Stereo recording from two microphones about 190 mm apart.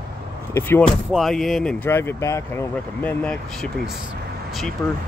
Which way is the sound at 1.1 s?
Centre (ahead or behind).